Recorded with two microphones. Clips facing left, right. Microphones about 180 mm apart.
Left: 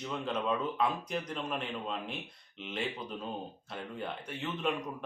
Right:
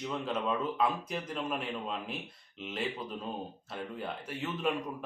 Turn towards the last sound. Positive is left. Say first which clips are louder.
# right 1 dB
turn(degrees=-5)  # may be behind; listen again after turning